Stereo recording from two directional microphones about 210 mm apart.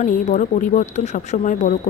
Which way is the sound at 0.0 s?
35° left (ahead or behind).